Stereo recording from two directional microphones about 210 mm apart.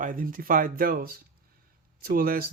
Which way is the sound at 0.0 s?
40° right (ahead or behind).